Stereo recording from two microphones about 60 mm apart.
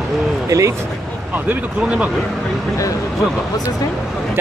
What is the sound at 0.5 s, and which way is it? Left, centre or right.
Speech, right.